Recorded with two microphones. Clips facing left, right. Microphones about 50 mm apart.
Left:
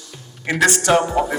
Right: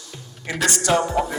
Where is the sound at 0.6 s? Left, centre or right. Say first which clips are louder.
Left 4 dB; left.